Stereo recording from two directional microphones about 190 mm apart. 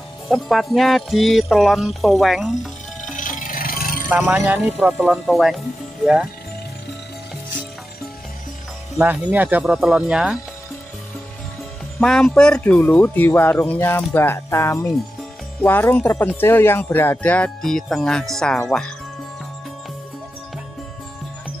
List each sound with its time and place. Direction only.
0.3 s speech: centre (ahead or behind)
3.1 s music: 45° left (ahead or behind)
4.1 s speech: 10° right (ahead or behind)
8.9 s speech: 10° right (ahead or behind)
12.0 s speech: 5° left (ahead or behind)